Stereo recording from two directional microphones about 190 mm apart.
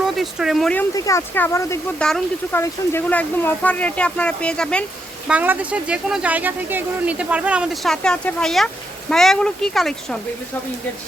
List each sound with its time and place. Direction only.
0.0 s speech: centre (ahead or behind)
0.9 s speech: 15° left (ahead or behind)
2.0 s speech: 5° left (ahead or behind)
5.3 s speech: 10° right (ahead or behind)